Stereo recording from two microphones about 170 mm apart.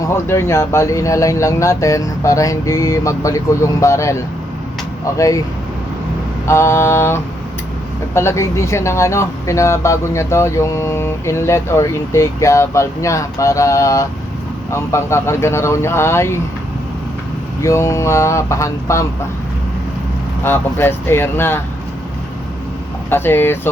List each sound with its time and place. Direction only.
0.0 s speech: 15° left (ahead or behind)
6.5 s speech: 15° left (ahead or behind)
17.6 s speech: 15° left (ahead or behind)
20.4 s speech: 15° left (ahead or behind)
23.0 s speech: 15° left (ahead or behind)